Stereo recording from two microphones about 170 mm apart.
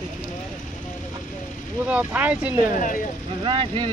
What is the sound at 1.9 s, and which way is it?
Speech, 10° right (ahead or behind).